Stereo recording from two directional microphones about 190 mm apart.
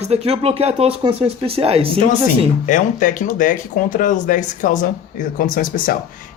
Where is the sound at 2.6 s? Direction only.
45° left (ahead or behind).